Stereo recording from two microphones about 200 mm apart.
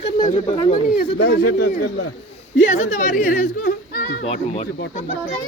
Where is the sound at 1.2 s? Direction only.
55° left (ahead or behind).